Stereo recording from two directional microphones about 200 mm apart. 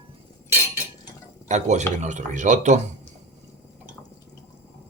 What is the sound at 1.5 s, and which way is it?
Speech, 35° right (ahead or behind).